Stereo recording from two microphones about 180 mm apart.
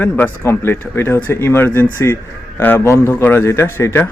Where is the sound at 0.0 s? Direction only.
10° left (ahead or behind).